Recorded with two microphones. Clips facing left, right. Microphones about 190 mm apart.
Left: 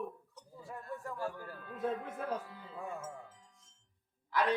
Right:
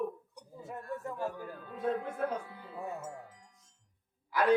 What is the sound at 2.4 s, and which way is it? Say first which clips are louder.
Speech: right 3 dB; 60° right (ahead or behind).